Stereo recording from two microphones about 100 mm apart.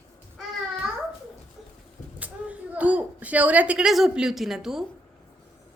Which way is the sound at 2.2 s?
15° right (ahead or behind).